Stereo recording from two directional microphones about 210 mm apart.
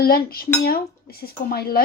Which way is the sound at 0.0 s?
45° left (ahead or behind).